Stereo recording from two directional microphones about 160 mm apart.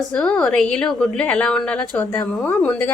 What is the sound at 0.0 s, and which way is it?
A woman's voice, 5° left (ahead or behind).